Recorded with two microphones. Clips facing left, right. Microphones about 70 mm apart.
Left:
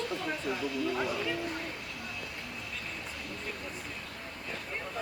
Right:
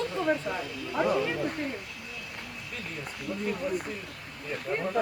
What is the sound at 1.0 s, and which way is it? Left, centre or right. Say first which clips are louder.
Speech: right 7 dB; right.